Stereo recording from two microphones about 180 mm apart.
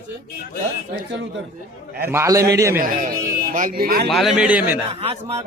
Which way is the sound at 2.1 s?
15° right (ahead or behind).